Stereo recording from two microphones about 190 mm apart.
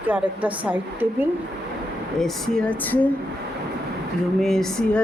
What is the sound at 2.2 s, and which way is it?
Speech, 5° left (ahead or behind).